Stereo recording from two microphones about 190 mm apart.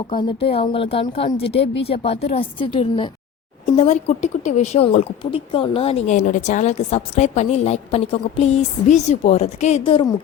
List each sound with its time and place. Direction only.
0.1 s speech: 25° left (ahead or behind)